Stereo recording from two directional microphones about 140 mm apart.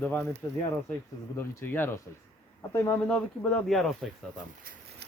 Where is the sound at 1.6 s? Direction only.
15° left (ahead or behind).